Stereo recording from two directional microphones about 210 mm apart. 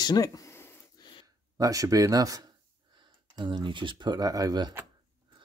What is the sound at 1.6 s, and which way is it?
Speech, 15° right (ahead or behind).